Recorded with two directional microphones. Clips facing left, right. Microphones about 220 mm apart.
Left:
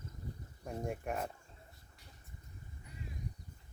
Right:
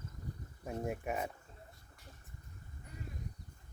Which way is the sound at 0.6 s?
5° right (ahead or behind).